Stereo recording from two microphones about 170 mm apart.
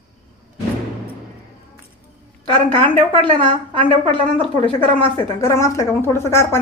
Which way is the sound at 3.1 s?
30° right (ahead or behind).